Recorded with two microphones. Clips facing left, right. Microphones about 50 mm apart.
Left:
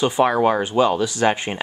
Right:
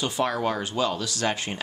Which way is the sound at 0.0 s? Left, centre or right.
Left.